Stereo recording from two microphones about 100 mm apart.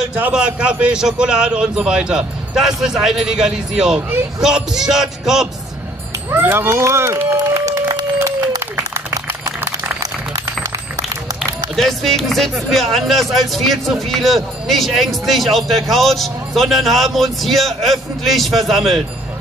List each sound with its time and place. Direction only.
0.1 s a man's voice: 10° right (ahead or behind)
6.3 s speech: 20° right (ahead or behind)
8.9 s a sound: 25° right (ahead or behind)
11.7 s a man's voice: centre (ahead or behind)